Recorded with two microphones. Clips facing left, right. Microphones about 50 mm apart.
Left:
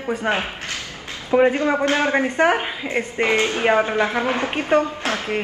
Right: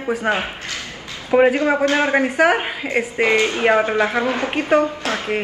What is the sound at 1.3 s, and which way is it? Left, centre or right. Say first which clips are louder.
A woman's voice: right 2 dB; centre.